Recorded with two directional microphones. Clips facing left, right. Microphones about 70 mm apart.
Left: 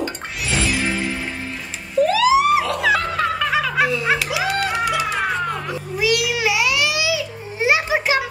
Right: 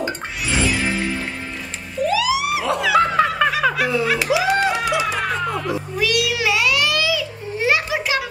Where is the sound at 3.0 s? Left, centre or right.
Right.